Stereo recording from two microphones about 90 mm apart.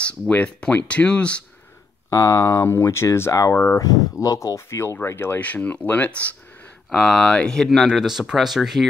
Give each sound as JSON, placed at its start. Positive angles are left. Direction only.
{"t": 0.0, "sound": "speech", "side_deg": 15}
{"t": 2.0, "sound": "speech", "side_deg": 35}
{"t": 6.9, "sound": "speech", "side_deg": 5}